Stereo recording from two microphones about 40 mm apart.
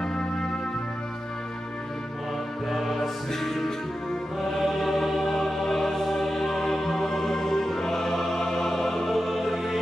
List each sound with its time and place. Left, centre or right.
0.0 s music: left
2.7 s music: centre